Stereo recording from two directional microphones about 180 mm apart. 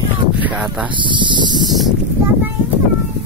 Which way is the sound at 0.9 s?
25° right (ahead or behind).